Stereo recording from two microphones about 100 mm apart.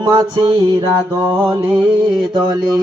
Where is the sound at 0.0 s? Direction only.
45° right (ahead or behind).